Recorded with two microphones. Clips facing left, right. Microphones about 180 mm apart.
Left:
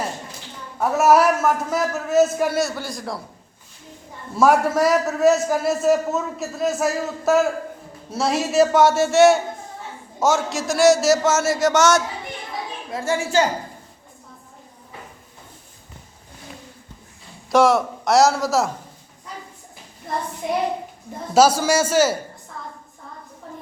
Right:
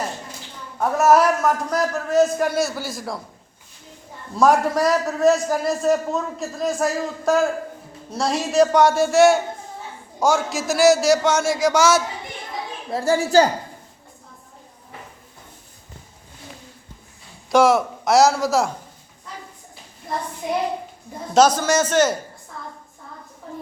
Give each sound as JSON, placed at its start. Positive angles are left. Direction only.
{"t": 0.8, "sound": "a man's voice", "side_deg": 5}
{"t": 4.4, "sound": "a man's voice", "side_deg": 5}
{"t": 12.9, "sound": "a woman's voice", "side_deg": -35}
{"t": 17.5, "sound": "a man's voice", "side_deg": 0}
{"t": 21.3, "sound": "a man's voice", "side_deg": 10}